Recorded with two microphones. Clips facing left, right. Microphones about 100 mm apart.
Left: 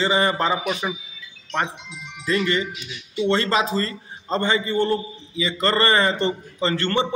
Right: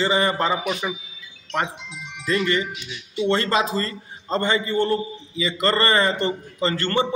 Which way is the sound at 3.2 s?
25° left (ahead or behind).